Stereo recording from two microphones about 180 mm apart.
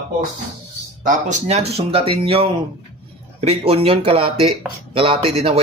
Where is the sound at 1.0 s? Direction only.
40° right (ahead or behind).